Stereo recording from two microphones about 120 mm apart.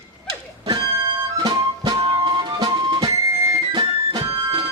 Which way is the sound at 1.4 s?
35° right (ahead or behind).